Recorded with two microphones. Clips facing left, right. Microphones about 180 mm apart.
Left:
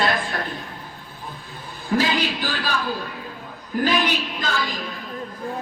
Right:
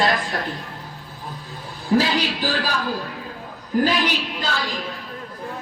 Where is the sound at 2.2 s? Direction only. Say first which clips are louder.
Right 2 dB; 35° right (ahead or behind).